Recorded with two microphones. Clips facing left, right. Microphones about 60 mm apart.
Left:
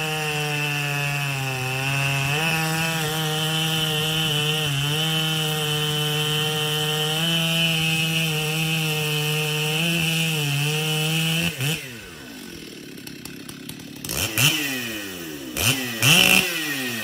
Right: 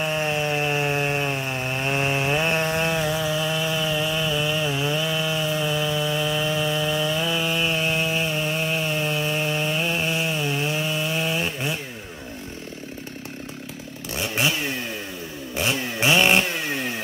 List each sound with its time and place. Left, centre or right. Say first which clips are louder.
0.0 s chainsaw: right 3 dB; centre
10.0 s chainsaw: right 1 dB; centre
14.1 s chainsaw: even; centre